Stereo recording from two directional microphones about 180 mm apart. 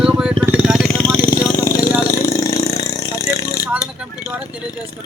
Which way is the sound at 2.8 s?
20° left (ahead or behind).